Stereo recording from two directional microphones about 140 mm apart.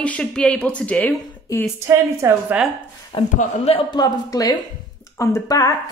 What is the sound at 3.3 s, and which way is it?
Speech, 50° left (ahead or behind).